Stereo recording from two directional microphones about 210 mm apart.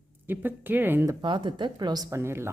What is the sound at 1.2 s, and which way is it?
Speech, 20° right (ahead or behind).